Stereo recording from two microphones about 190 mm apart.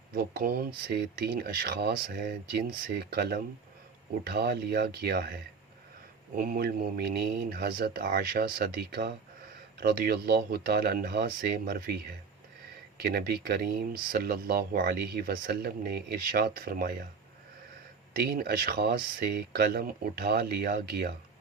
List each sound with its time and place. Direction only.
0.1 s speech: 55° right (ahead or behind)
18.1 s speech: 50° right (ahead or behind)